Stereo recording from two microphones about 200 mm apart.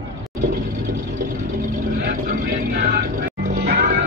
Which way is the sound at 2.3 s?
45° right (ahead or behind).